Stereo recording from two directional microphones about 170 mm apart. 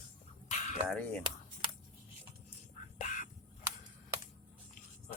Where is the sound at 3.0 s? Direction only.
45° left (ahead or behind).